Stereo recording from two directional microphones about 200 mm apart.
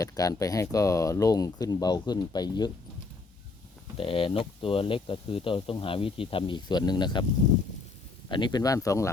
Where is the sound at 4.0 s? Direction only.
25° left (ahead or behind).